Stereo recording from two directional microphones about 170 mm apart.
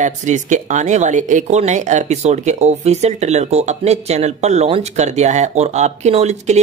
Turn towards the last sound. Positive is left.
turn(degrees=-40)  # may be behind; listen again after turning